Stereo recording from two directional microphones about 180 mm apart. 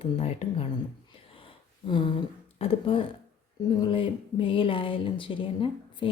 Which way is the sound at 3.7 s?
25° left (ahead or behind).